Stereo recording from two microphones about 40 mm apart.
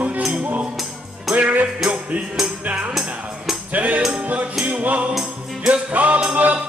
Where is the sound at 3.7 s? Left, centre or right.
Right.